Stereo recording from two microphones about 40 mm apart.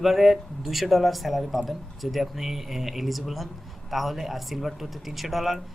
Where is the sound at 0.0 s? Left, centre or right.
Centre.